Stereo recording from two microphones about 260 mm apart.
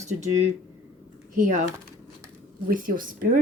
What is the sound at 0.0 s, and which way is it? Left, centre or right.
Speech, right.